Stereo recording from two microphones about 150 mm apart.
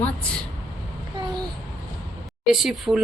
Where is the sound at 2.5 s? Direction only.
Centre (ahead or behind).